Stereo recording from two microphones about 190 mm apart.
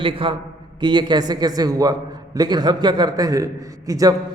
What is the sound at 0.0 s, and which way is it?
A man's voice, 30° right (ahead or behind).